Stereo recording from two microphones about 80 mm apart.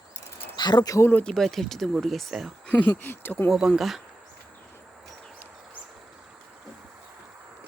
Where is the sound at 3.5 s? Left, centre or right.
Centre.